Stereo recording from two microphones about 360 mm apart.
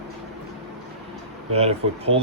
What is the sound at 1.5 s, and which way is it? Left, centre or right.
Speech, centre.